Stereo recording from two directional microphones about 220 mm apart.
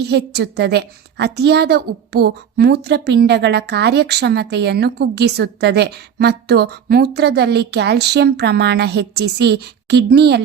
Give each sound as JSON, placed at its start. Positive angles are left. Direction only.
{"t": 0.0, "sound": "a woman's voice", "side_deg": -50}